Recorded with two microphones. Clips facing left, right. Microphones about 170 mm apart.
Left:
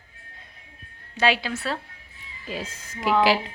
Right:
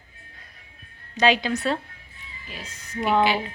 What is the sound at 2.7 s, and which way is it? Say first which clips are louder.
Speech: right 1 dB; 90° left.